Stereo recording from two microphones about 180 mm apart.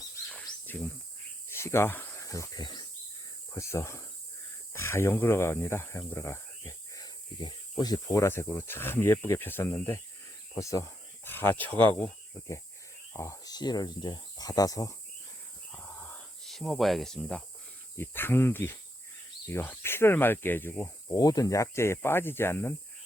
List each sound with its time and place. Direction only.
0.3 s bird: 5° left (ahead or behind)
1.5 s speech: 15° left (ahead or behind)
13.1 s speech: 15° left (ahead or behind)
15.7 s snake: 10° left (ahead or behind)
17.9 s speech: 10° left (ahead or behind)